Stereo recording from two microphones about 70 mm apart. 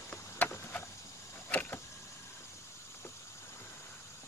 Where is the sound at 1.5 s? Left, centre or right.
Left.